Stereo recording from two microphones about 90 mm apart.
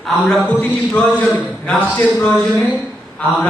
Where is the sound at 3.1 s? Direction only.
15° left (ahead or behind).